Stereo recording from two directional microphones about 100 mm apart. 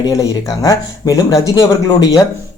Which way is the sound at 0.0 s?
40° left (ahead or behind).